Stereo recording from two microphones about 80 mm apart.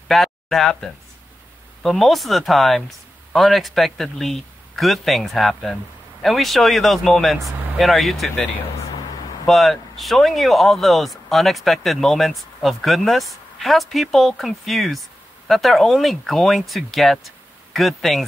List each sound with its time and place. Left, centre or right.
0.1 s speech: centre
9.5 s speech: centre